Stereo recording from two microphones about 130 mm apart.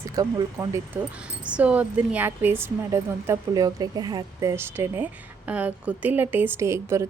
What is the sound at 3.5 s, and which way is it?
A woman's voice, 30° right (ahead or behind).